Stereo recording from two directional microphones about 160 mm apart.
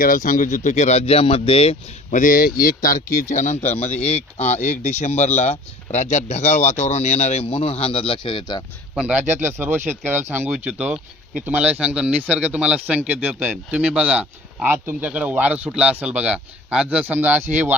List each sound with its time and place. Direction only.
0.0 s speech: 60° left (ahead or behind); by 1.7 s 35° left (ahead or behind)
2.0 s speech: 55° left (ahead or behind); by 8.6 s 30° left (ahead or behind)
9.0 s speech: 10° right (ahead or behind)